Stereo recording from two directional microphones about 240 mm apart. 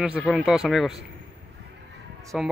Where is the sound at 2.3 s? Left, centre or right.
Centre.